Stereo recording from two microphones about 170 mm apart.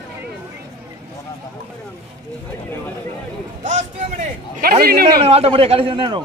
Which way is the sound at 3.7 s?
45° right (ahead or behind).